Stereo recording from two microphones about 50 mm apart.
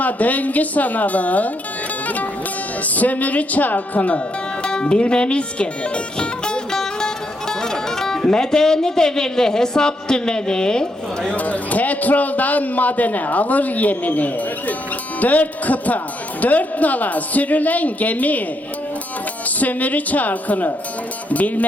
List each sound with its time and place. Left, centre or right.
0.0 s a man's voice: left
2.8 s a man's voice: left
4.6 s speech: centre
11.3 s a man's voice: left
19.5 s a man's voice: left